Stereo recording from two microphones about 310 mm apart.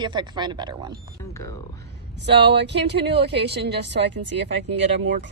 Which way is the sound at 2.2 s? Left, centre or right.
Right.